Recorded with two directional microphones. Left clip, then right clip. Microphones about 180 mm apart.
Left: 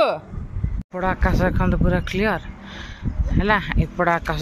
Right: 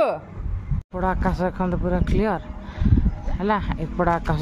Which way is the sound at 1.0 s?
15° right (ahead or behind).